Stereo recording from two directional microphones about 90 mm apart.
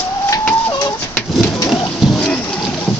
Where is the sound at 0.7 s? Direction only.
45° left (ahead or behind).